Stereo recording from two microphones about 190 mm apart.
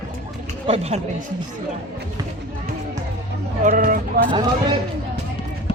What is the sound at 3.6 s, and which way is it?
Speech, 45° right (ahead or behind).